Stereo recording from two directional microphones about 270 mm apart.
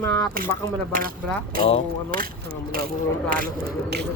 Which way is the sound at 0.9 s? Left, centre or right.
Right.